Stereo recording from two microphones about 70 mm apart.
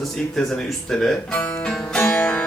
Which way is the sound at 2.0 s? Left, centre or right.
Left.